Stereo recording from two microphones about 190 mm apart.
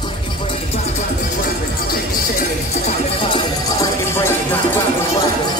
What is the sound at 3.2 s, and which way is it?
Music, 20° left (ahead or behind).